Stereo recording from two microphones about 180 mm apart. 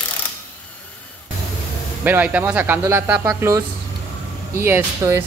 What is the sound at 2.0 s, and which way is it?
Speech, 10° right (ahead or behind).